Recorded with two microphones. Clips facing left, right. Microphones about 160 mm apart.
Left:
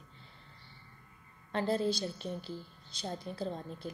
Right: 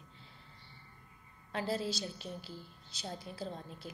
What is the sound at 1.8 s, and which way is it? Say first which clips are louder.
Speech: left 6 dB; 55° left (ahead or behind).